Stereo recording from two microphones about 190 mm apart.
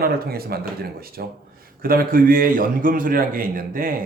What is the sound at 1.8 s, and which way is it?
Speech, 50° right (ahead or behind).